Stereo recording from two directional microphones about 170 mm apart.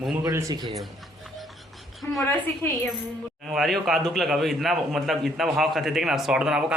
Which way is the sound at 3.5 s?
Centre (ahead or behind).